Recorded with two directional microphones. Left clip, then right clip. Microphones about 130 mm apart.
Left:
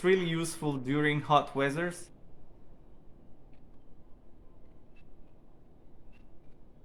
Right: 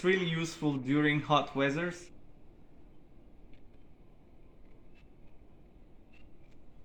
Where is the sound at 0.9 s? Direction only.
25° left (ahead or behind).